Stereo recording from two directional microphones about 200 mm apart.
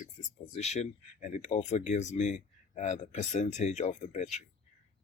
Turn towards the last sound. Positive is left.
turn(degrees=35)  # may be behind; listen again after turning